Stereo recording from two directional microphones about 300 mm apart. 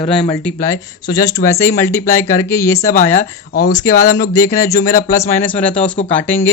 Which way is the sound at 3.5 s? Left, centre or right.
Left.